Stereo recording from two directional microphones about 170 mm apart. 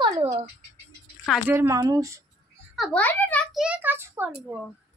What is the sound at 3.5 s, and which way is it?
A child's voice, 5° right (ahead or behind).